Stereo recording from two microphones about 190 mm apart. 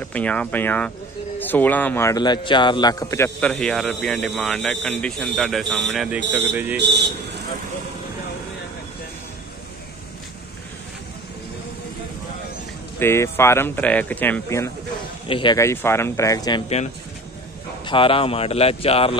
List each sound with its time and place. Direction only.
0.0 s a man's voice: 5° left (ahead or behind)
6.2 s speech: 65° right (ahead or behind)
6.5 s speech: 10° right (ahead or behind)
6.8 s a man's voice: 60° right (ahead or behind)
13.0 s a man's voice: 15° left (ahead or behind)
15.2 s a man's voice: 25° left (ahead or behind)
16.6 s speech: 35° left (ahead or behind)